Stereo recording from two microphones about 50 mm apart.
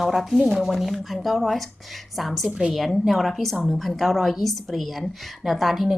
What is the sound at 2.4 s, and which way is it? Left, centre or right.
Speech, right.